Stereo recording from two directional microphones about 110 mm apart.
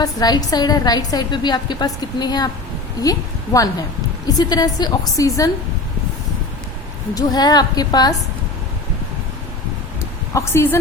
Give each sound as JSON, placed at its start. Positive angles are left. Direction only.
{"t": 0.0, "sound": "a woman's voice", "side_deg": 35}
{"t": 7.1, "sound": "a woman's voice", "side_deg": 35}
{"t": 10.0, "sound": "a sound", "side_deg": 25}